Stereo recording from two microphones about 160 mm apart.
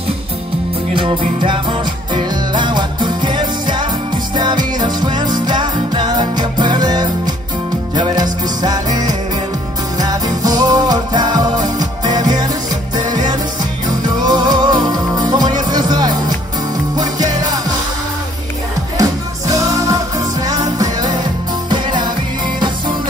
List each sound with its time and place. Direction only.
1.4 s music: 30° right (ahead or behind)
18.9 s music: 20° right (ahead or behind)